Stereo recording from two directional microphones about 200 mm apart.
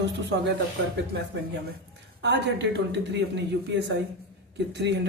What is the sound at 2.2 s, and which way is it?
Speech, 60° right (ahead or behind).